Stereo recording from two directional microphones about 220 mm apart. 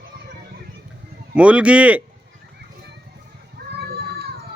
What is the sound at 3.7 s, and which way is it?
Children playing, 45° right (ahead or behind).